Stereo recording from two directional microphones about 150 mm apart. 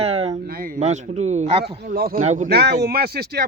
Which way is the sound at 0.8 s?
50° right (ahead or behind).